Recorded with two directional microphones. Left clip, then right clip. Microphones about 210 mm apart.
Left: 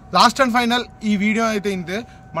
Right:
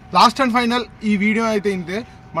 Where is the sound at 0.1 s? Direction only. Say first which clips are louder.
Even; 30° left (ahead or behind).